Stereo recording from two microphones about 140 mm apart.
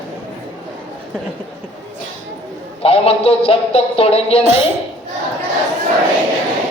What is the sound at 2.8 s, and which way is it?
A man's voice, 45° left (ahead or behind).